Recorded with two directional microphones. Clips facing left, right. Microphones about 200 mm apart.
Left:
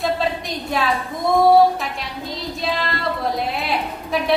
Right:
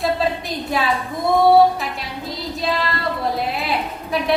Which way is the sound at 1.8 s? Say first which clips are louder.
Right 1 dB; centre (ahead or behind).